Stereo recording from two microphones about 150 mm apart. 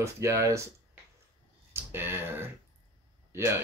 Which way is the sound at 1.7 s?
15° right (ahead or behind).